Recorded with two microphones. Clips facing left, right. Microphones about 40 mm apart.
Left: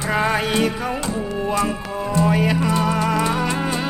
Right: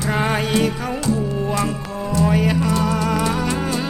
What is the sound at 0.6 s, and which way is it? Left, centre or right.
Music, centre.